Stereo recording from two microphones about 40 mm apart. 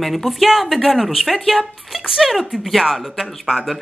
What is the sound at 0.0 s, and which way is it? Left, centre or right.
Speech, centre.